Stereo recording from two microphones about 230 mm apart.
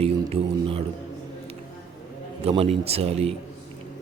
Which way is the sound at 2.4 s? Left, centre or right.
Right.